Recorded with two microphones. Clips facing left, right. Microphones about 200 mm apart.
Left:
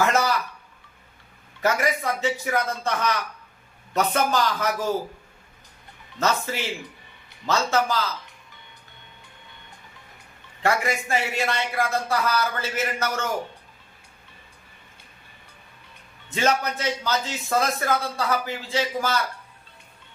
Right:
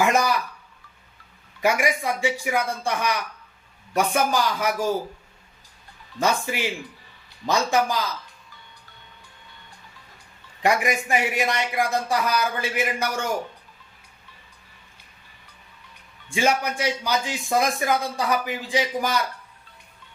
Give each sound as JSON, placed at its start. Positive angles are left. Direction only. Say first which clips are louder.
{"t": 0.0, "sound": "a sound", "louder": "right 1 dB", "side_deg": -15}
{"t": 1.6, "sound": "a man's voice", "louder": "right 1 dB", "side_deg": -10}
{"t": 6.1, "sound": "a man's voice", "louder": "right 1 dB", "side_deg": -15}
{"t": 10.6, "sound": "a man's voice", "louder": "right 2 dB", "side_deg": -15}
{"t": 16.3, "sound": "a man's voice", "louder": "right 1 dB", "side_deg": -10}